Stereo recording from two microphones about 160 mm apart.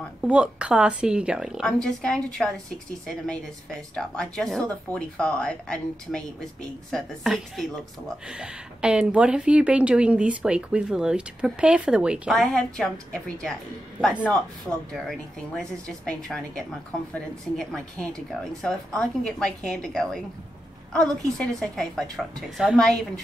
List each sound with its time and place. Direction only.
0.2 s a woman's voice: 5° right (ahead or behind)